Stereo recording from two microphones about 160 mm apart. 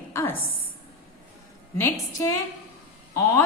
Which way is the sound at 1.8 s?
20° left (ahead or behind).